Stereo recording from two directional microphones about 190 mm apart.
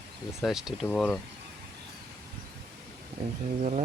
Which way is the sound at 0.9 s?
10° left (ahead or behind).